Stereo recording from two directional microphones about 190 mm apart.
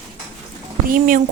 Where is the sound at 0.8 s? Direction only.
45° right (ahead or behind).